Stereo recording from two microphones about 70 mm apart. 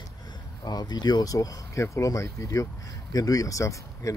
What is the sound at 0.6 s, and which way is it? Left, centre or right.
Speech, left.